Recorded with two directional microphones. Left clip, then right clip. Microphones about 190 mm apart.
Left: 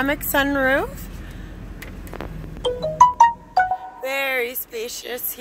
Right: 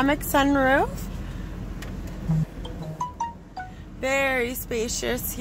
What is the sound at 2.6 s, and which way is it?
Music, 60° left (ahead or behind).